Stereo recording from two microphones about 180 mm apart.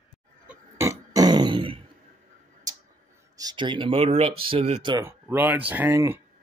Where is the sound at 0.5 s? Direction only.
15° right (ahead or behind).